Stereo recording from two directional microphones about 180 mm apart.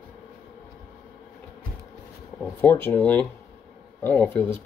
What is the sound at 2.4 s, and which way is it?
Speech, 10° left (ahead or behind).